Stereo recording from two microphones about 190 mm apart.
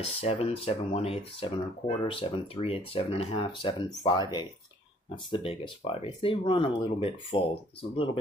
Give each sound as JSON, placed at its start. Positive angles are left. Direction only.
{"t": 0.0, "sound": "speech", "side_deg": 30}